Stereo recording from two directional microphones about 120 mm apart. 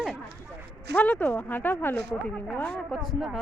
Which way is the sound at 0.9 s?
15° left (ahead or behind).